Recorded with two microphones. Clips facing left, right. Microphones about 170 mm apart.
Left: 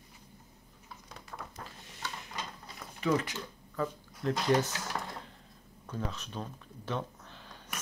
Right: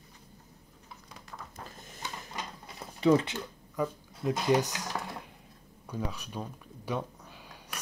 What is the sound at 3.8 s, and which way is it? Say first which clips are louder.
Speech: right 2 dB; 15° right (ahead or behind).